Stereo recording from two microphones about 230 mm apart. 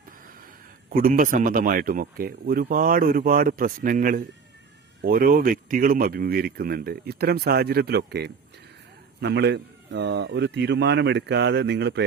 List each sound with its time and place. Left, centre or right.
0.9 s speech: right